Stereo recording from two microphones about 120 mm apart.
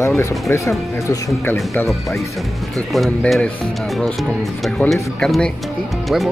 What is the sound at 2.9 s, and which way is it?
Speech, centre (ahead or behind).